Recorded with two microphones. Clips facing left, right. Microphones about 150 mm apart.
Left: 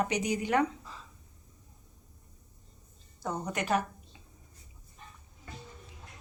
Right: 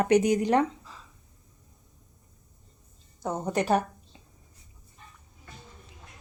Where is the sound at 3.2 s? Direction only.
20° right (ahead or behind).